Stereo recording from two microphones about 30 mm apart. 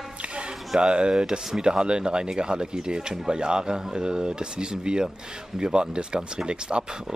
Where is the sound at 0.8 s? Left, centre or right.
Right.